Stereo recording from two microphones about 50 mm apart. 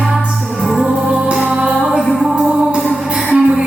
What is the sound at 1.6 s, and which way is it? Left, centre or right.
Music, centre.